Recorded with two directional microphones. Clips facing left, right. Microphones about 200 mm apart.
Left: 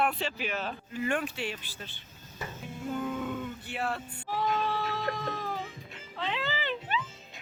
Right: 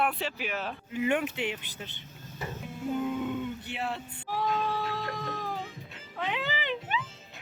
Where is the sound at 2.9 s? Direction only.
15° right (ahead or behind).